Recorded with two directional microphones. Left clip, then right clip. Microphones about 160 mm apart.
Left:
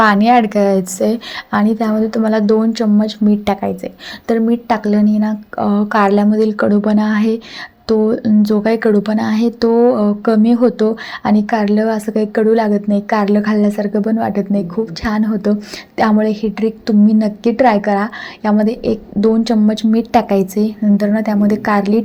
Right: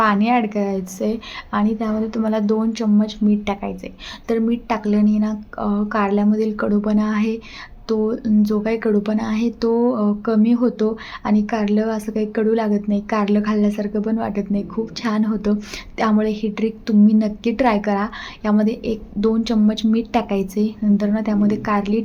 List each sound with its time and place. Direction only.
0.0 s a woman's voice: 35° left (ahead or behind)